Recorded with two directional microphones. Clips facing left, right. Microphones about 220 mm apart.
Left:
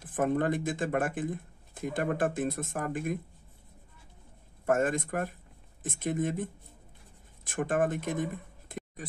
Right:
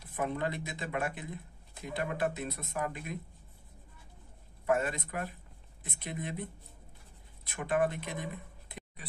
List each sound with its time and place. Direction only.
0.0 s speech: 50° left (ahead or behind)
4.6 s speech: 45° left (ahead or behind)